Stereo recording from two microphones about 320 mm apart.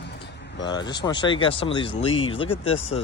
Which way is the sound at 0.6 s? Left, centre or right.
Centre.